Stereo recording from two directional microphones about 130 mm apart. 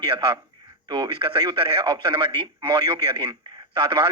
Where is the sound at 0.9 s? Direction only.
35° right (ahead or behind).